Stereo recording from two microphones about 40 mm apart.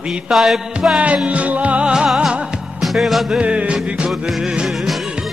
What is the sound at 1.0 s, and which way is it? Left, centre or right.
Music, right.